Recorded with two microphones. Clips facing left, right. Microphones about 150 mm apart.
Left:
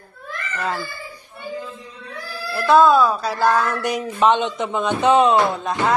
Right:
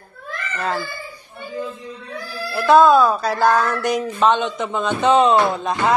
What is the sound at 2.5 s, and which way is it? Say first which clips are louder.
Speech: right 2 dB; centre (ahead or behind).